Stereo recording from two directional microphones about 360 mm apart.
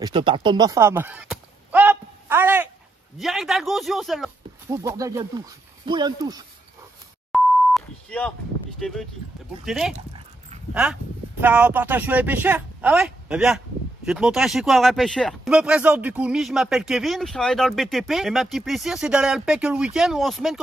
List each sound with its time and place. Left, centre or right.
0.0 s a sound: centre
3.2 s speech: centre
7.3 s beep: centre
9.7 s speech: centre
9.9 s dog: centre
10.7 s speech: centre